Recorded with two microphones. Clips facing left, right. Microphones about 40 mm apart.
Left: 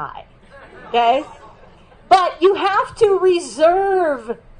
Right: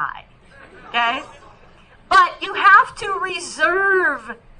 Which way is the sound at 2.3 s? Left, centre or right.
Right.